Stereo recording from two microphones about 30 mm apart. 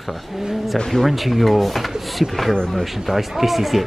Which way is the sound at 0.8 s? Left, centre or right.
Centre.